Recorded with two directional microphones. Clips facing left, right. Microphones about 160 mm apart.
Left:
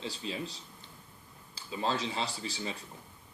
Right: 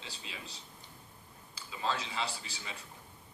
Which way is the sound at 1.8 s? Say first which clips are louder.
Left 3 dB; 35° left (ahead or behind).